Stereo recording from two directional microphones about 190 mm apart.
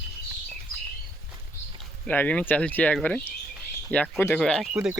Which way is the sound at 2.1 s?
10° left (ahead or behind).